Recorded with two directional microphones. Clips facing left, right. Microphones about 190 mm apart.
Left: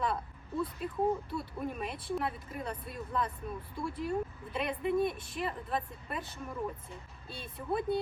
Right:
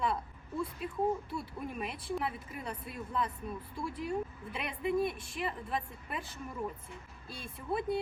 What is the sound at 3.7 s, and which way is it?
A woman's voice, centre (ahead or behind).